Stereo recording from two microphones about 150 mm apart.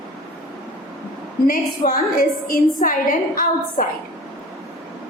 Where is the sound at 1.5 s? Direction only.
70° left (ahead or behind).